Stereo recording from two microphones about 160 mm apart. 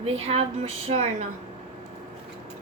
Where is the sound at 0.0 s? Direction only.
40° right (ahead or behind).